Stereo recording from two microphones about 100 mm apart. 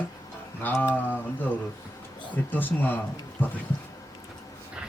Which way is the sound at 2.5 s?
20° left (ahead or behind).